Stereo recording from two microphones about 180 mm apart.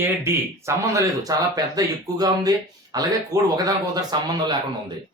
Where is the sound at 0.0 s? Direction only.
15° right (ahead or behind).